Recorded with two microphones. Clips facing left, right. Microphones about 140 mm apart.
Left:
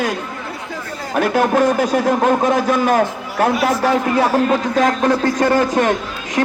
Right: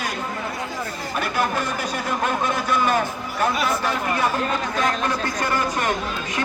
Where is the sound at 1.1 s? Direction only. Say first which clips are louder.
Left 9 dB; 60° left (ahead or behind); by 6.4 s 90° left.